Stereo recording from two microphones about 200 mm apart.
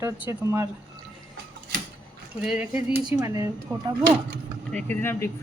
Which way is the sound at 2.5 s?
5° right (ahead or behind).